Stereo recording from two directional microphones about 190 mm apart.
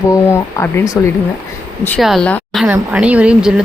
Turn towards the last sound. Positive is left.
turn(degrees=-5)  # may be behind; listen again after turning